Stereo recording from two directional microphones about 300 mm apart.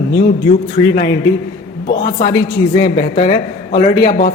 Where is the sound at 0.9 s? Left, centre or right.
Left.